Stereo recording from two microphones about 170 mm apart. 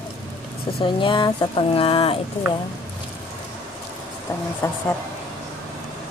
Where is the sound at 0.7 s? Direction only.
30° left (ahead or behind).